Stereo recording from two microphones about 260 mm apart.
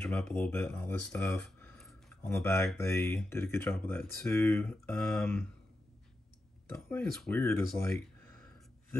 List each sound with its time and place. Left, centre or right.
0.0 s speech: centre
6.7 s speech: centre